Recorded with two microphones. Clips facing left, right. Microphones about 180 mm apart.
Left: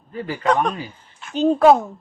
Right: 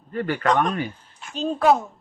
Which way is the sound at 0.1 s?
65° right (ahead or behind).